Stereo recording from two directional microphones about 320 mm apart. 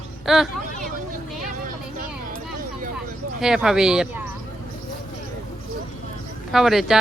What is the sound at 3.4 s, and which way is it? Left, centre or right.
Speech, centre.